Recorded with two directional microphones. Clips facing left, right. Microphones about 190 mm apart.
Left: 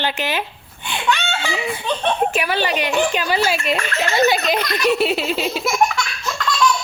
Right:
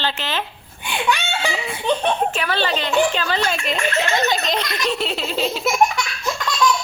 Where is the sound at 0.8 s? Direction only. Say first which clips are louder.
Even; 15° right (ahead or behind).